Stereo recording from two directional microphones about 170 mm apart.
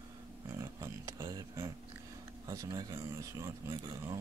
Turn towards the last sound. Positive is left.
turn(degrees=-25)  # may be behind; listen again after turning